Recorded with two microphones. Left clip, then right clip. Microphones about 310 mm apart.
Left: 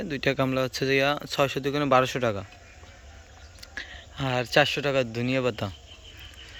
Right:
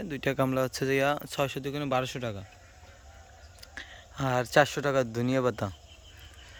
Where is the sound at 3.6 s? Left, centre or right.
Centre.